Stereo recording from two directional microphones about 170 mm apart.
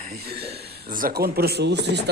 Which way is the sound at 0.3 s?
70° right (ahead or behind).